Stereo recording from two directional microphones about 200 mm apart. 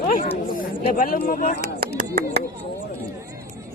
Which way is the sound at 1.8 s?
50° right (ahead or behind).